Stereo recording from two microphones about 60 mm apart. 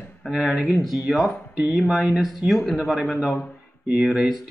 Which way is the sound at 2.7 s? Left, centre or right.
Centre.